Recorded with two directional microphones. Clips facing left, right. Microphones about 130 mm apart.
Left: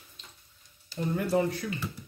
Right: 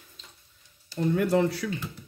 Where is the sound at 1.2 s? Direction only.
80° right.